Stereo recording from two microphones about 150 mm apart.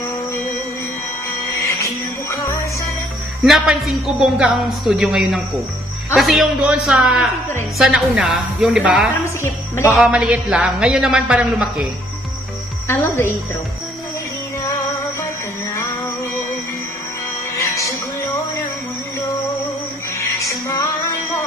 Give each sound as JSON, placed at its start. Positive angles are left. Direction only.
{"t": 1.5, "sound": "music", "side_deg": 20}
{"t": 3.4, "sound": "a man's voice", "side_deg": 0}
{"t": 9.4, "sound": "speech", "side_deg": 15}
{"t": 9.9, "sound": "a man's voice", "side_deg": -5}
{"t": 12.8, "sound": "a woman's voice", "side_deg": 20}
{"t": 17.6, "sound": "music", "side_deg": 20}
{"t": 20.2, "sound": "music", "side_deg": 20}